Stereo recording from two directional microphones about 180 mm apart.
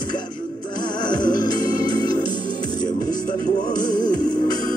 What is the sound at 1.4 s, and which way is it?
Organ, 25° left (ahead or behind).